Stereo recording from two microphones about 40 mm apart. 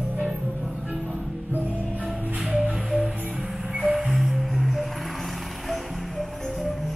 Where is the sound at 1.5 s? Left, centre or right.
Right.